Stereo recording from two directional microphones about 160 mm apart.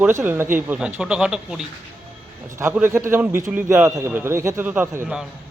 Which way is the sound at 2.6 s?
15° right (ahead or behind).